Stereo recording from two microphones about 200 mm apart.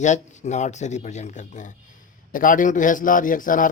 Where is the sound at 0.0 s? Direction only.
35° left (ahead or behind).